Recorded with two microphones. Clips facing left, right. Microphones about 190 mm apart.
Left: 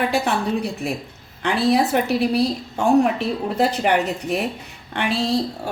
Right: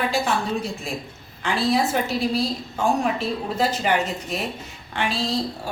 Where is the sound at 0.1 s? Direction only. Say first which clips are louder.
Left 2 dB; 65° left (ahead or behind).